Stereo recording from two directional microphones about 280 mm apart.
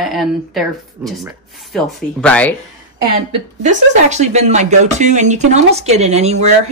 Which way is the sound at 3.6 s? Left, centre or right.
Right.